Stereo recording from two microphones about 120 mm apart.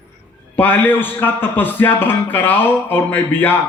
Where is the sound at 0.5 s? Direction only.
15° left (ahead or behind).